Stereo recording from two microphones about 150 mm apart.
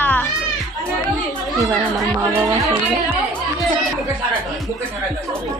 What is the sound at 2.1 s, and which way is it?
Speech, 15° right (ahead or behind).